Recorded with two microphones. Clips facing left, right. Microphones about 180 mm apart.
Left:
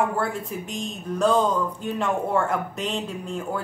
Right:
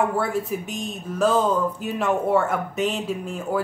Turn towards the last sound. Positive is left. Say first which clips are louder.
# right 3 dB
turn(degrees=-5)  # may be behind; listen again after turning